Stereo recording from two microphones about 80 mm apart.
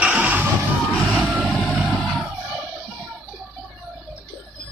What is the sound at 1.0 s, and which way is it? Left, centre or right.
Vehicle, centre.